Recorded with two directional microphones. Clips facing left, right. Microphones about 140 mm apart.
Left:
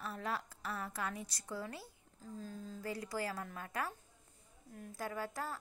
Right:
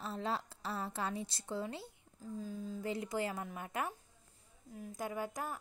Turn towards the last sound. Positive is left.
turn(degrees=-15)  # may be behind; listen again after turning